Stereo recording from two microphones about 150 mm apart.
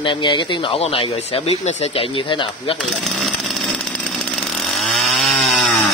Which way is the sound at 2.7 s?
Centre (ahead or behind).